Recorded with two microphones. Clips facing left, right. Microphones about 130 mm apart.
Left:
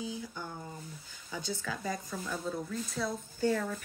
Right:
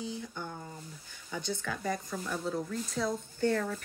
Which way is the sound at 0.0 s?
5° left (ahead or behind).